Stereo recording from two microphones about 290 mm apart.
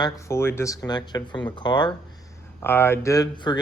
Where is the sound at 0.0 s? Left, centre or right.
Centre.